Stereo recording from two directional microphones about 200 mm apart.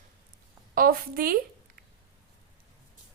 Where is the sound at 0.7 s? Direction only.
45° right (ahead or behind).